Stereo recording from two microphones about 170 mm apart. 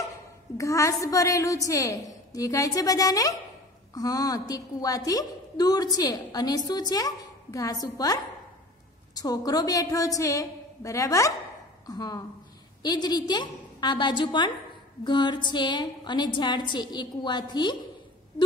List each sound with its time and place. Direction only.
0.6 s a woman's voice: 20° left (ahead or behind)